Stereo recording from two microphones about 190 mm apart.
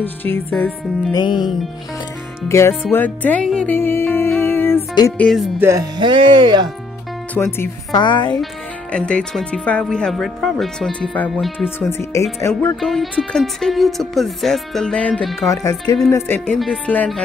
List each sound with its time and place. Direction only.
0.0 s speech: 10° left (ahead or behind)
1.1 s speech: 20° left (ahead or behind)
4.4 s music: 10° left (ahead or behind)
5.1 s speech: 5° left (ahead or behind)
5.6 s speech: 15° right (ahead or behind)
7.3 s speech: 10° left (ahead or behind)
8.0 s speech: 25° left (ahead or behind)
8.9 s speech: 5° left (ahead or behind)
11.8 s speech: 15° left (ahead or behind)
12.8 s speech: centre (ahead or behind)
16.5 s speech: centre (ahead or behind)